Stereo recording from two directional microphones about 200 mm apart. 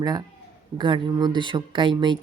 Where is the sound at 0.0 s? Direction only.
20° right (ahead or behind).